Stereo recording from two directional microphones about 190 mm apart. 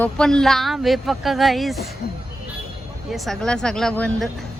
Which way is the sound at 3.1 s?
Centre (ahead or behind).